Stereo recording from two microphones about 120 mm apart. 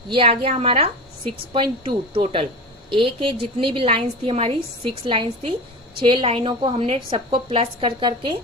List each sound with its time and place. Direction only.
0.1 s a woman's voice: 50° right (ahead or behind)